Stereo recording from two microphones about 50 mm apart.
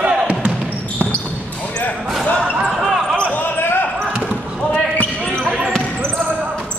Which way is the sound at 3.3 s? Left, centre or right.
Left.